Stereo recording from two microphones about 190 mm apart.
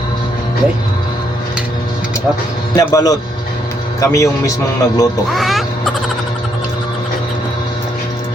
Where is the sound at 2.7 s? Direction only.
20° left (ahead or behind).